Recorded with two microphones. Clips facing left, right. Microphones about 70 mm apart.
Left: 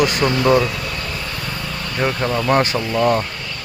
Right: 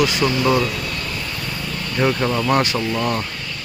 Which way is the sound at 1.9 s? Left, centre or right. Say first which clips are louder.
Right 1 dB; centre.